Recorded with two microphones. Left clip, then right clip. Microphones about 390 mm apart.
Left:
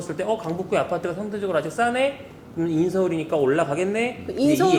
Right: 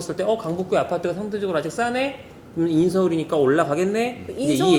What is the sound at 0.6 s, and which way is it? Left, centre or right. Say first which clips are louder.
A man's voice: right 2 dB; right.